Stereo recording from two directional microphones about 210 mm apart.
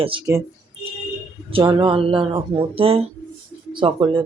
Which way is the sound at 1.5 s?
25° right (ahead or behind).